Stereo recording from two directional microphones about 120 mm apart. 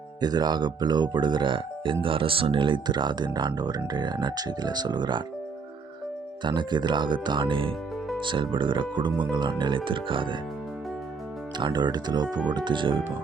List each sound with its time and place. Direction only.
0.2 s speech: 35° right (ahead or behind)
6.4 s speech: 40° right (ahead or behind)
11.5 s speech: 40° right (ahead or behind)